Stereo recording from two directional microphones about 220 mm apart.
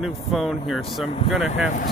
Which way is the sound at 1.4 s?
35° left (ahead or behind).